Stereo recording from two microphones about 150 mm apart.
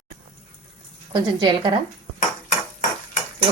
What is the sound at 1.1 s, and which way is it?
Speech, 35° right (ahead or behind).